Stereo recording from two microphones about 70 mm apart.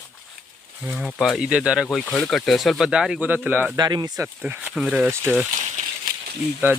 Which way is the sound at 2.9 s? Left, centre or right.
Centre.